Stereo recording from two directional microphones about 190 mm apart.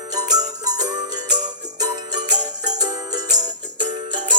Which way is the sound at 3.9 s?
25° right (ahead or behind).